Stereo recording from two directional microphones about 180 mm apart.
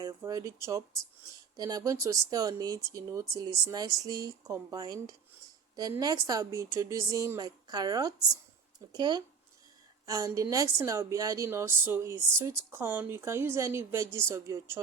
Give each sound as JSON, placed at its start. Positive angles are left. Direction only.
{"t": 0.0, "sound": "a woman's voice", "side_deg": -20}